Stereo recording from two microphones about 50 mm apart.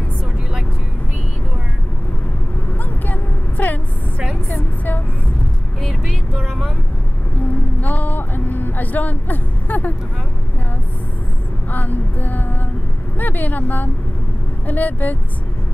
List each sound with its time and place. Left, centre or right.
2.8 s a sound: left
5.8 s music: centre
7.8 s music: left
11.7 s vehicle: left
14.7 s speech: left